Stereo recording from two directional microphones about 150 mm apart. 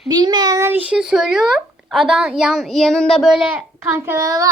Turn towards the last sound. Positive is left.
turn(degrees=-25)  # may be behind; listen again after turning